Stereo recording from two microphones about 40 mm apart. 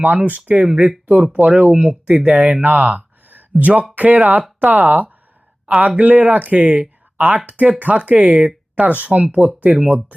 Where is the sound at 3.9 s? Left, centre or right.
Right.